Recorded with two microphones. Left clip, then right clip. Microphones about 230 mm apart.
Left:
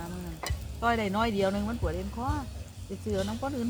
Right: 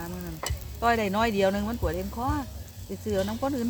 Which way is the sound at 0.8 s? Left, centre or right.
Right.